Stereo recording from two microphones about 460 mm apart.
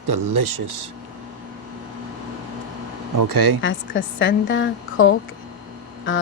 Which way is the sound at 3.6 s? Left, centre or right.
Left.